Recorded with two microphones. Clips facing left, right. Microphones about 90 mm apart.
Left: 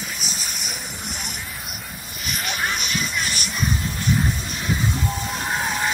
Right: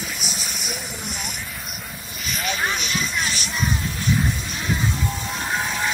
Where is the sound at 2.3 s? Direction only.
55° left (ahead or behind).